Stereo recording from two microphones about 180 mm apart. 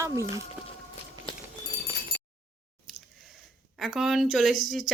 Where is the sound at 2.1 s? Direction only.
65° left (ahead or behind).